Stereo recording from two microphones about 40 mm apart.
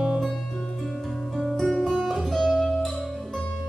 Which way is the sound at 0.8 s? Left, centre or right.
Centre.